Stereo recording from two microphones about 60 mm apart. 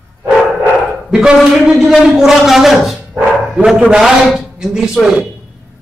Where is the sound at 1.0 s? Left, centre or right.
Centre.